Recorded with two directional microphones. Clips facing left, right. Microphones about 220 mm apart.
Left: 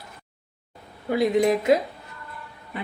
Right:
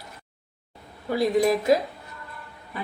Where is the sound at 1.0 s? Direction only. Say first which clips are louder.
Left 1 dB; 20° left (ahead or behind).